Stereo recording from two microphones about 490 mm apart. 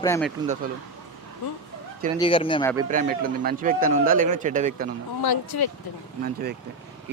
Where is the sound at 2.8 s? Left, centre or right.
Centre.